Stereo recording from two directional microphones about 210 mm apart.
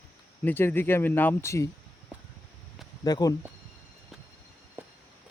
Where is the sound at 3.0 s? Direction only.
20° left (ahead or behind).